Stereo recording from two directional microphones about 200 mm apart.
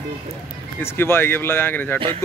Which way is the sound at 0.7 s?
10° left (ahead or behind).